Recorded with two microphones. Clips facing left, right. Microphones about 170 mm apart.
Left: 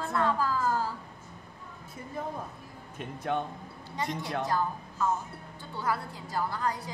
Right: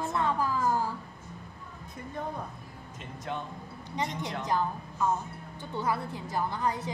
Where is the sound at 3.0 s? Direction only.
60° left (ahead or behind).